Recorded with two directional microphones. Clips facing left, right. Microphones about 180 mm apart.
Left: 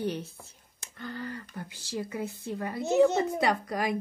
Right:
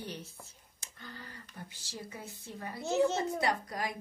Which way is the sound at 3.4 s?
85° left.